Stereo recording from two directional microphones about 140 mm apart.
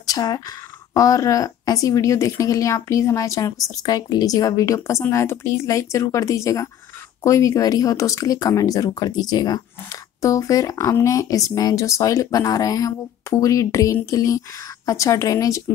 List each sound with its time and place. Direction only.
0.0 s speech: 25° left (ahead or behind)